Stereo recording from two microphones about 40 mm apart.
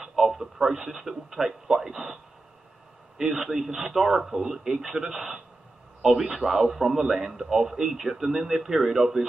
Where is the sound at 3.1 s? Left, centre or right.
Centre.